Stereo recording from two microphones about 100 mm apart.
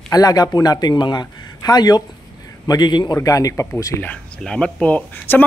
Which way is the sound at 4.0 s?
10° left (ahead or behind).